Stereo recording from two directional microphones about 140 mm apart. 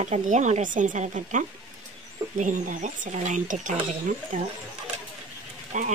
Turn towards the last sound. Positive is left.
turn(degrees=-65)  # may be behind; listen again after turning